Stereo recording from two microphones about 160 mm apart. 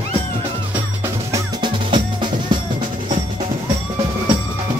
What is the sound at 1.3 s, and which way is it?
Drum, 30° right (ahead or behind).